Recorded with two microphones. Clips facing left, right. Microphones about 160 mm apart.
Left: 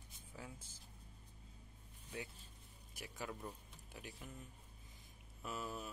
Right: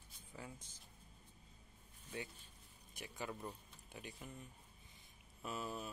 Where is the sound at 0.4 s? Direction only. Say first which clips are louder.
Right 1 dB; centre (ahead or behind).